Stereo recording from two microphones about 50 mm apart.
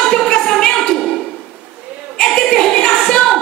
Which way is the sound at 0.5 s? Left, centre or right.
Centre.